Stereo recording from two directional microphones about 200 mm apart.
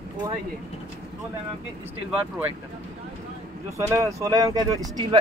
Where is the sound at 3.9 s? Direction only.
15° right (ahead or behind).